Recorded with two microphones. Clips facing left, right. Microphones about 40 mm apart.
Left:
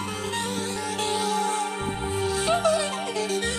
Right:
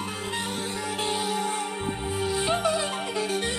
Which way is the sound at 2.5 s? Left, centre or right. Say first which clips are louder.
Left 4 dB; centre.